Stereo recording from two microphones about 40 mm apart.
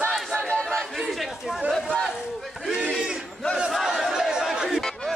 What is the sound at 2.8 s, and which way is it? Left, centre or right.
Battle cry, right.